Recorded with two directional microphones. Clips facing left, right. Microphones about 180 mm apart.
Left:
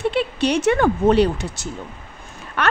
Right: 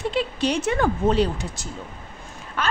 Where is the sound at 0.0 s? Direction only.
65° left (ahead or behind).